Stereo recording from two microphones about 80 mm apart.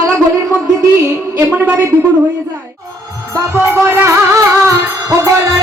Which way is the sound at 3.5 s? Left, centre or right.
Right.